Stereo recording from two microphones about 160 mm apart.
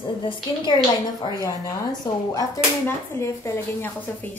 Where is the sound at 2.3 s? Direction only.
20° left (ahead or behind).